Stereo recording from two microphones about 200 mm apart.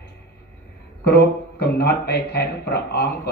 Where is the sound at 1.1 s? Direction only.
55° left (ahead or behind).